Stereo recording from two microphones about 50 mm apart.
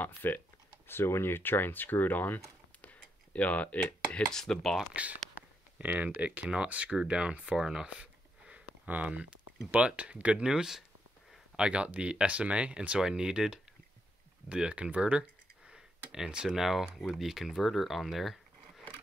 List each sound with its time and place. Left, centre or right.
0.0 s speech: left
0.8 s speech: left
2.8 s a sound: left
4.3 s speech: centre
4.9 s speech: right
7.5 s a sound: centre
9.8 s speech: right
10.4 s speech: centre
13.0 s speech: centre
16.5 s speech: centre